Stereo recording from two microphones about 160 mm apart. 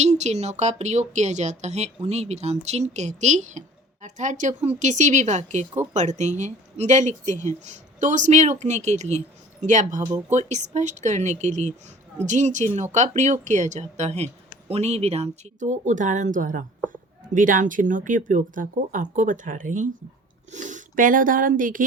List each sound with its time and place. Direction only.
0.0 s speech: 45° right (ahead or behind)
10.0 s speech: 20° right (ahead or behind)
10.3 s speech: 45° right (ahead or behind)